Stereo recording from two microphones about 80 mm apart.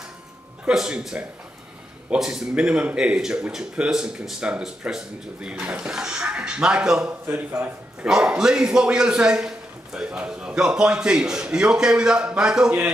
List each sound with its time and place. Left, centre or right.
0.7 s speech: centre
7.1 s a man's voice: centre